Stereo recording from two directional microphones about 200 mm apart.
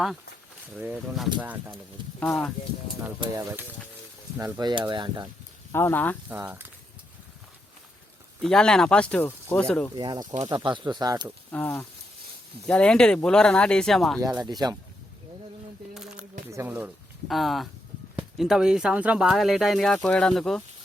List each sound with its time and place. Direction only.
0.8 s speech: 5° right (ahead or behind)
2.2 s speech: 5° left (ahead or behind)
3.0 s speech: 20° right (ahead or behind)
5.7 s speech: 10° left (ahead or behind)
6.2 s speech: 10° right (ahead or behind)
8.4 s speech: 5° left (ahead or behind)
9.9 s speech: 20° right (ahead or behind)
11.5 s speech: 10° left (ahead or behind)
14.4 s speech: 20° right (ahead or behind)
16.0 s a sound: 5° right (ahead or behind)
16.5 s speech: 10° right (ahead or behind)